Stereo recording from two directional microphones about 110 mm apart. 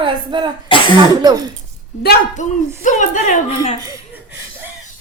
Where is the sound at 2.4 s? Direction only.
90° left.